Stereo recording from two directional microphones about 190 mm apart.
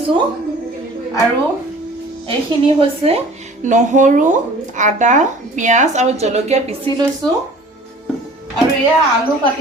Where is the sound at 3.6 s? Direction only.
40° right (ahead or behind).